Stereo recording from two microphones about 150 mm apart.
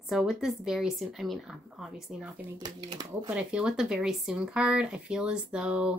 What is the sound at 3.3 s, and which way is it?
A woman's voice, 5° right (ahead or behind).